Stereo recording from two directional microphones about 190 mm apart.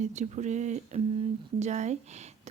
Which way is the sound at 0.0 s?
35° right (ahead or behind).